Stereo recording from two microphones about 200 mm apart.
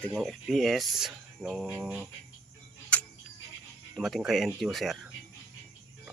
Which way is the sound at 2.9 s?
5° left (ahead or behind).